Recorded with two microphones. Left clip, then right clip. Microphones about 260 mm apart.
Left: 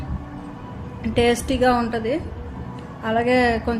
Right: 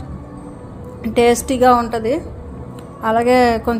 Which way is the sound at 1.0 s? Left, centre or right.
Centre.